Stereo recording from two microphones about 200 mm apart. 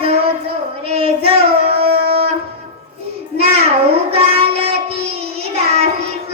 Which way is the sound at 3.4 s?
30° right (ahead or behind).